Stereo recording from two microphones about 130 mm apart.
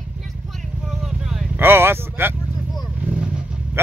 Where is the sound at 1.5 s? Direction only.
15° right (ahead or behind).